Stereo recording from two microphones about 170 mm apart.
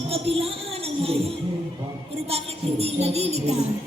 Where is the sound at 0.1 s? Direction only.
35° right (ahead or behind).